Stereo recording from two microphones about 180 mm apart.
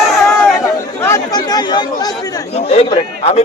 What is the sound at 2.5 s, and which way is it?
Speech, 35° left (ahead or behind).